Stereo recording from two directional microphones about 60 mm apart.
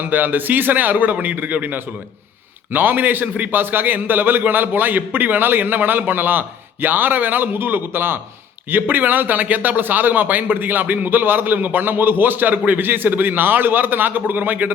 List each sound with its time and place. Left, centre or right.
0.0 s a man's voice: right